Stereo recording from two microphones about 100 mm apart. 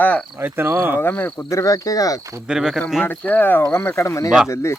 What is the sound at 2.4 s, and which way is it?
Speech, 5° right (ahead or behind).